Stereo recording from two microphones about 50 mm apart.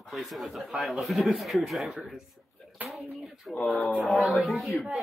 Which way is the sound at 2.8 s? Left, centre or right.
Right.